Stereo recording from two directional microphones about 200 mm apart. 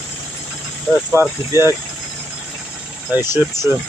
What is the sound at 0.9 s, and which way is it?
Speech, centre (ahead or behind).